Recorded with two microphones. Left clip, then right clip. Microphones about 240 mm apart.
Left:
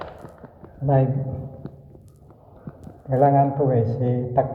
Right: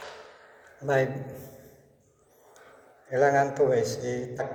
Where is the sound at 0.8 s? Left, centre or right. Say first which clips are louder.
Left 3 dB; right.